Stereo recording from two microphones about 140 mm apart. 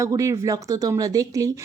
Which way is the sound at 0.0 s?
20° right (ahead or behind).